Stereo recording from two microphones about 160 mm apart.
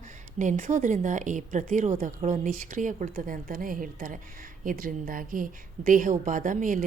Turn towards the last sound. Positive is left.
turn(degrees=-55)  # may be behind; listen again after turning